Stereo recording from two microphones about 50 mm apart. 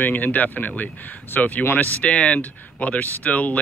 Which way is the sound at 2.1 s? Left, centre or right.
Left.